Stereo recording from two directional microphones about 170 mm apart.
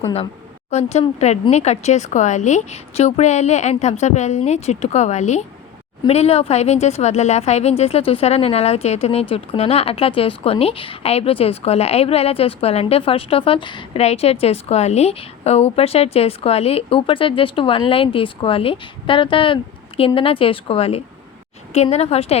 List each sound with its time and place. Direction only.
0.7 s speech: 40° left (ahead or behind)